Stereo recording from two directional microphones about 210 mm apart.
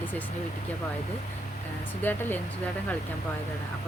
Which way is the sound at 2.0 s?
10° left (ahead or behind).